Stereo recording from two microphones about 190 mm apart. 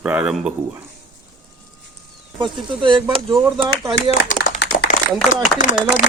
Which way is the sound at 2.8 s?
25° right (ahead or behind).